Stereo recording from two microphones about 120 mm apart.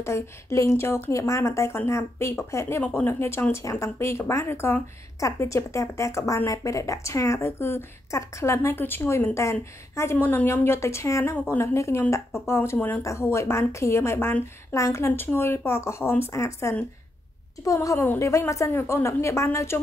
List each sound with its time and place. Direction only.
0.0 s speech: 25° left (ahead or behind)